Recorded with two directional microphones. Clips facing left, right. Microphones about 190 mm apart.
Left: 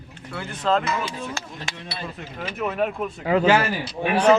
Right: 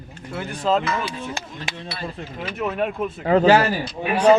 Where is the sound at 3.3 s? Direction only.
40° right (ahead or behind).